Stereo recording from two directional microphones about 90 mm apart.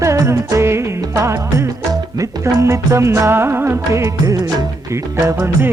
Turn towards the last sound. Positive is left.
turn(degrees=-25)  # may be behind; listen again after turning